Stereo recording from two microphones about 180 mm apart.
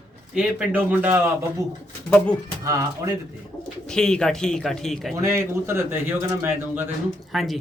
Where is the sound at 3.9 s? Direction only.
5° left (ahead or behind).